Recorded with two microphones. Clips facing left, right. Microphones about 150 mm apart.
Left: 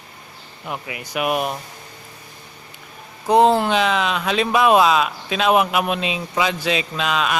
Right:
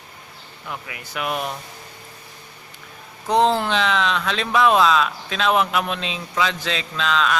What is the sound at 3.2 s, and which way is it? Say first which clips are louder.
A man's voice: left 4 dB; 10° left (ahead or behind).